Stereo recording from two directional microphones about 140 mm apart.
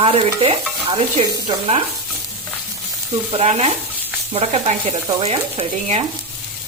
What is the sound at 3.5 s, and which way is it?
Speech, 45° right (ahead or behind).